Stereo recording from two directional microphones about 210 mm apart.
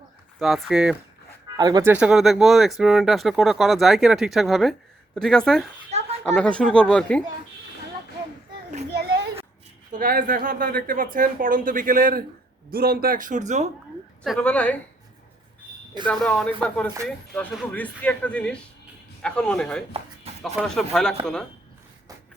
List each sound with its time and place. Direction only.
0.3 s speech: centre (ahead or behind)
1.5 s speech: 20° right (ahead or behind)
1.9 s speech: 5° right (ahead or behind)
5.9 s children playing: 30° right (ahead or behind)
6.2 s speech: 5° left (ahead or behind)
8.9 s children playing: 50° right (ahead or behind)
9.9 s speech: 40° right (ahead or behind)
14.3 s speech: 5° left (ahead or behind)
16.0 s speech: 5° left (ahead or behind)
20.3 s music: 30° right (ahead or behind)
20.6 s speech: centre (ahead or behind)